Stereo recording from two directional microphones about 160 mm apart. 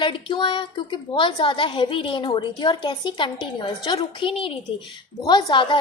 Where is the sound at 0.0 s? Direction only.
30° left (ahead or behind).